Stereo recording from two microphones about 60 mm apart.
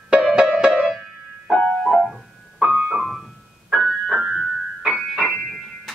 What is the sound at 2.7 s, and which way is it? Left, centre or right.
Keyboard, centre.